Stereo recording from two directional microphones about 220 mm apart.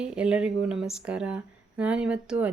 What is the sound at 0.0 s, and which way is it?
Speech, 5° right (ahead or behind).